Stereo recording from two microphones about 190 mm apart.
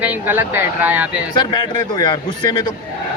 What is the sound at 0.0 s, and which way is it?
Speech, 10° right (ahead or behind).